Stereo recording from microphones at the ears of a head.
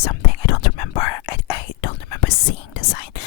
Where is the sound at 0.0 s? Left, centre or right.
Left.